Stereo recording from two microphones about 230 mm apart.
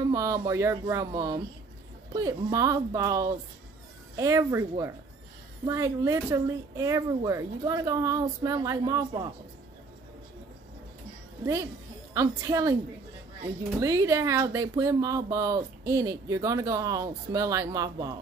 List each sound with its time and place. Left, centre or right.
0.1 s speech: centre
12.1 s speech: centre
13.7 s speech: centre